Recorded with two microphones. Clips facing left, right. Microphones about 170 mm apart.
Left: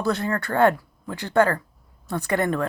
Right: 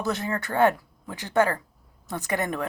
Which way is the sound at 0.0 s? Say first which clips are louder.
Left 4 dB; 15° right (ahead or behind).